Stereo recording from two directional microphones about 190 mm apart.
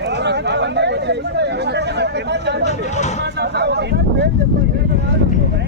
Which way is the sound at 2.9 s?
35° left (ahead or behind).